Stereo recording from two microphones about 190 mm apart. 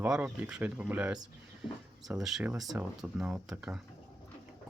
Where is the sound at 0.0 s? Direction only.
5° right (ahead or behind).